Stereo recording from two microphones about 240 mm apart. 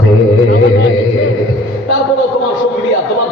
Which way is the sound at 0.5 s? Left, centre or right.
Left.